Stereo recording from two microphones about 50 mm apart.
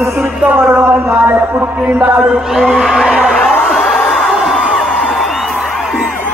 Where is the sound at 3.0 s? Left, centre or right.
Centre.